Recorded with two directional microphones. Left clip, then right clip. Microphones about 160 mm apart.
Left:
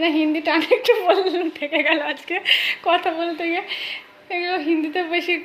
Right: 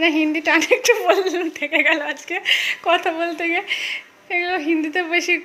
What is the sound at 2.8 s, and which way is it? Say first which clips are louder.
A woman's voice: right 1 dB; 15° right (ahead or behind).